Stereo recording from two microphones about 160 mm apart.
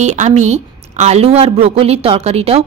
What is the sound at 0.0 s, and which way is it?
A woman's voice, 45° right (ahead or behind).